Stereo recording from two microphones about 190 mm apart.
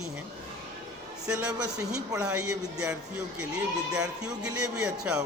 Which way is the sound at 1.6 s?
20° right (ahead or behind).